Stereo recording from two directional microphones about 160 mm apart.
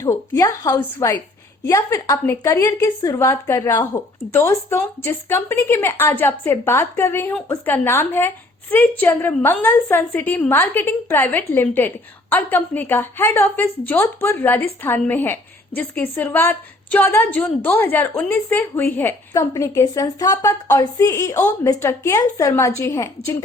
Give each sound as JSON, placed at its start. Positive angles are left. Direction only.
{"t": 0.0, "sound": "a woman's voice", "side_deg": 20}